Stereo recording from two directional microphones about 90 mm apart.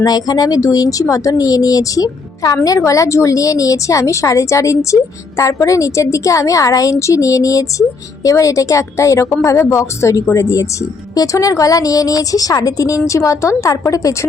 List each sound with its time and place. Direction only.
0.0 s speech: 45° left (ahead or behind)